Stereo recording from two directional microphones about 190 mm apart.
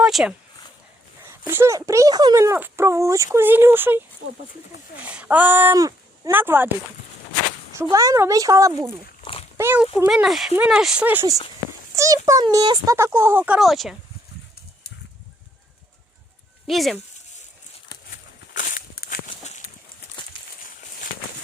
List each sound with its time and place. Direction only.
0.0 s speech: centre (ahead or behind)
1.2 s a child's voice: 15° right (ahead or behind)
5.0 s a child's voice: 10° right (ahead or behind)
7.8 s a child's voice: 15° right (ahead or behind); by 13.9 s centre (ahead or behind)
16.6 s speech: centre (ahead or behind)
18.1 s walk: 45° left (ahead or behind)